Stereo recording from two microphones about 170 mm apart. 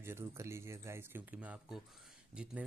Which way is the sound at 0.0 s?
15° right (ahead or behind).